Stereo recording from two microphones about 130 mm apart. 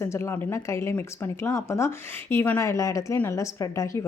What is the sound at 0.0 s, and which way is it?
A woman's voice, 20° left (ahead or behind).